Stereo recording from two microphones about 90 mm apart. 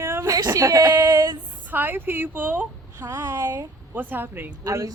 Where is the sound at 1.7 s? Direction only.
25° right (ahead or behind).